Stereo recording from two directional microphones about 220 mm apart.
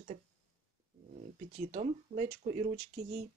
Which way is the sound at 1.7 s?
35° right (ahead or behind).